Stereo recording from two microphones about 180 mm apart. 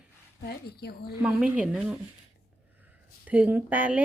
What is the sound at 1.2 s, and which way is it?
Speech, 5° right (ahead or behind).